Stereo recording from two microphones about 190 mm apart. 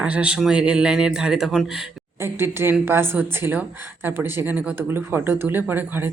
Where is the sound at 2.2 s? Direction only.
15° right (ahead or behind).